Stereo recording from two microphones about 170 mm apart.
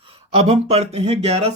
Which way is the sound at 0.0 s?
35° right (ahead or behind).